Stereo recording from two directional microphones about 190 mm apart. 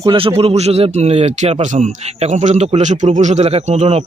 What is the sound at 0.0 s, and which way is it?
Speech, 25° right (ahead or behind).